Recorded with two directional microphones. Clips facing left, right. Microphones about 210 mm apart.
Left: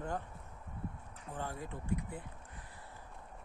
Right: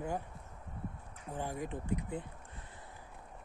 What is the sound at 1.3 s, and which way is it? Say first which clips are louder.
Speech: right 4 dB; 15° right (ahead or behind).